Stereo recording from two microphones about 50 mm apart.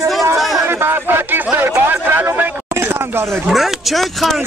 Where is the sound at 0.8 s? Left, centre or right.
Right.